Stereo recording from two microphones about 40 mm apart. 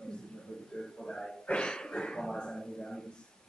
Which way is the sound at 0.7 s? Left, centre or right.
Centre.